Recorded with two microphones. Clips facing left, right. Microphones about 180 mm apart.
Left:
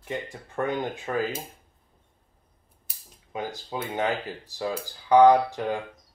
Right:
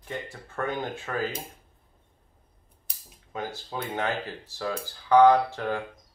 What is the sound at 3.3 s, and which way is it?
Speech, 15° left (ahead or behind).